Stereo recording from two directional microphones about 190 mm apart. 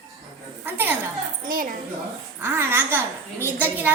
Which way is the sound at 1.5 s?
45° right (ahead or behind).